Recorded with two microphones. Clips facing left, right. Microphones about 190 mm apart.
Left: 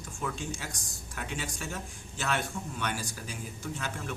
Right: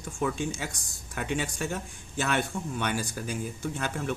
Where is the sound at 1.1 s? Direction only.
60° right (ahead or behind).